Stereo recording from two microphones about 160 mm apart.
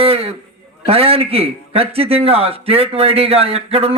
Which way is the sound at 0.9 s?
35° right (ahead or behind).